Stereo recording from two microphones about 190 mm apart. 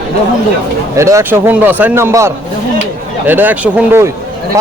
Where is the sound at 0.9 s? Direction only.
15° right (ahead or behind).